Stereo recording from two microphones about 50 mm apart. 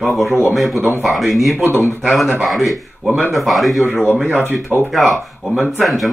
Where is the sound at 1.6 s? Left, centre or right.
Left.